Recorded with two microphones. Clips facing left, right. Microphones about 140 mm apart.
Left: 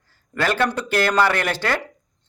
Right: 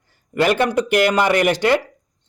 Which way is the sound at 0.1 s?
15° right (ahead or behind).